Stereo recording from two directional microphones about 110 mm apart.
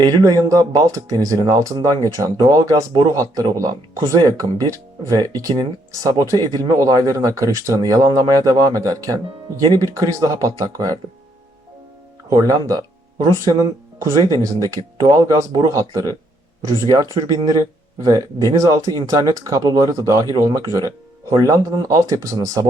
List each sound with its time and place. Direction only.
0.0 s speech: 35° right (ahead or behind)
12.3 s speech: 35° right (ahead or behind)
17.2 s speech: 35° right (ahead or behind)